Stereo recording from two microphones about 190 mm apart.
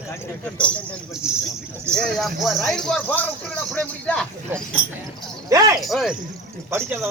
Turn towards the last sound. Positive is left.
turn(degrees=-10)  # may be behind; listen again after turning